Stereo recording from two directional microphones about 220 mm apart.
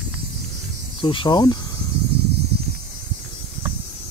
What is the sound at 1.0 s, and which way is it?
Speech, 20° left (ahead or behind).